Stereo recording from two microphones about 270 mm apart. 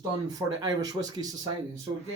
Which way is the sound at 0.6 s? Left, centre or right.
Centre.